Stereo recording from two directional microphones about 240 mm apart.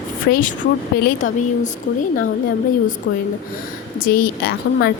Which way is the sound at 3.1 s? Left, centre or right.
Left.